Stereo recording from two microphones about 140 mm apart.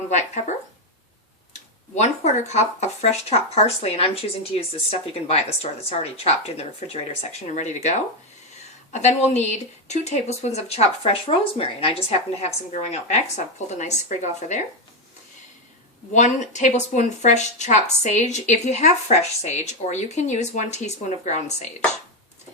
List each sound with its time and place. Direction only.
0.1 s speech: 55° left (ahead or behind)
1.5 s speech: 55° left (ahead or behind)
16.1 s speech: 60° left (ahead or behind)